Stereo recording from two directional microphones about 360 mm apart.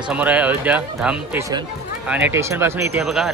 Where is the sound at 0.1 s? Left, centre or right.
Centre.